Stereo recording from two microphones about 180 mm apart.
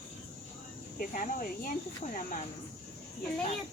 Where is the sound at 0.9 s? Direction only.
45° left (ahead or behind).